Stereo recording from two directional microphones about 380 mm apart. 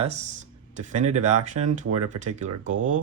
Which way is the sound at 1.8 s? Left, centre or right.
Right.